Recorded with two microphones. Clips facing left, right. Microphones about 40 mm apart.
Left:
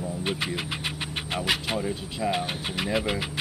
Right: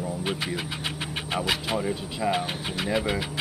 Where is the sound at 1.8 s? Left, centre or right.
Centre.